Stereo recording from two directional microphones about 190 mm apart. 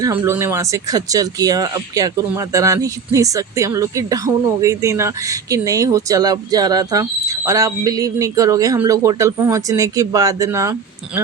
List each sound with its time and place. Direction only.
0.0 s speech: 15° right (ahead or behind)